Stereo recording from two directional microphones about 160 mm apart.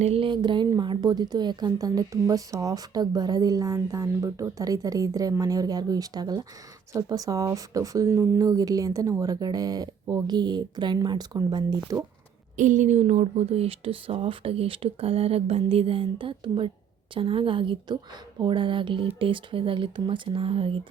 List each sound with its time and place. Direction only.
0.0 s a woman's voice: 35° right (ahead or behind)
12.5 s speech: 50° right (ahead or behind); by 20.8 s 35° right (ahead or behind)